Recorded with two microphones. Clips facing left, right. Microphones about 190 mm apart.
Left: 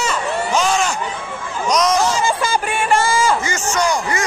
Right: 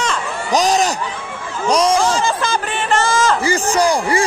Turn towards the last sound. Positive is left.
turn(degrees=-35)  # may be behind; listen again after turning